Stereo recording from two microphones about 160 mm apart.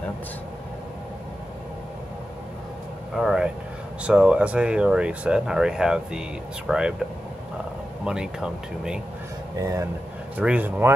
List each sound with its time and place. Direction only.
3.2 s vehicle: centre (ahead or behind)
4.0 s speech: 5° right (ahead or behind)
8.0 s speech: 5° right (ahead or behind)
9.6 s speech: 20° right (ahead or behind)
10.3 s speech: 10° right (ahead or behind)